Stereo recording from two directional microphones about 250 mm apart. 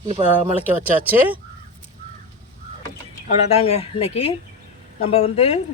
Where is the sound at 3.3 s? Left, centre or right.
Left.